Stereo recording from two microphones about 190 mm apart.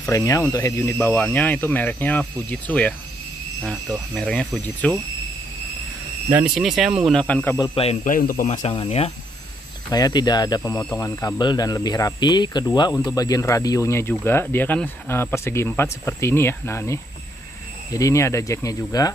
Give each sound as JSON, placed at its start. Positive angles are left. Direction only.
{"t": 0.0, "sound": "speech", "side_deg": 15}
{"t": 6.3, "sound": "speech", "side_deg": -5}
{"t": 7.5, "sound": "speech", "side_deg": 25}
{"t": 8.0, "sound": "speech", "side_deg": 45}
{"t": 9.8, "sound": "speech", "side_deg": 20}